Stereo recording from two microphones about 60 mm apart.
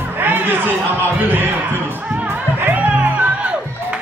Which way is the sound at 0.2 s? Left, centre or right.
Right.